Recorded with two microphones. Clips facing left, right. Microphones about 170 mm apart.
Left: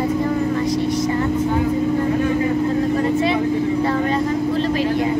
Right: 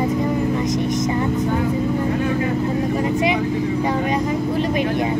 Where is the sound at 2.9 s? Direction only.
15° right (ahead or behind).